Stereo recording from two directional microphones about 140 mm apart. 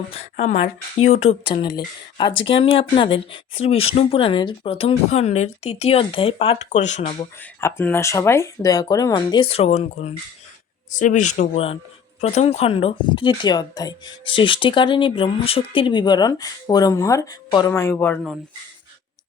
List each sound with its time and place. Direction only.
0.1 s speech: 50° left (ahead or behind)
1.6 s speech: 30° left (ahead or behind)
6.7 s speech: 55° left (ahead or behind)
7.6 s speech: 15° left (ahead or behind); by 10.2 s 50° left (ahead or behind)
10.9 s speech: 65° left (ahead or behind)
11.5 s speech: 45° left (ahead or behind); by 17.7 s 30° left (ahead or behind)
17.7 s speech: 15° left (ahead or behind)